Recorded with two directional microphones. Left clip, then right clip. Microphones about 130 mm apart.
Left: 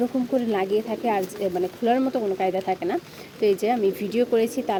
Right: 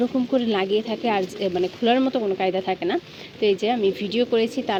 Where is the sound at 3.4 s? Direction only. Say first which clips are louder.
Even; 15° left (ahead or behind).